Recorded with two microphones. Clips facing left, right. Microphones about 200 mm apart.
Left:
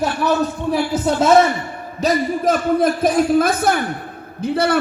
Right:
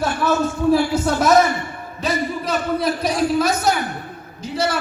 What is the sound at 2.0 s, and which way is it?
A man's voice, 45° left (ahead or behind).